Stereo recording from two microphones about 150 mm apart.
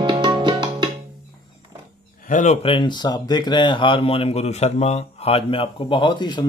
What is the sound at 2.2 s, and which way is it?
Speech, 55° left (ahead or behind).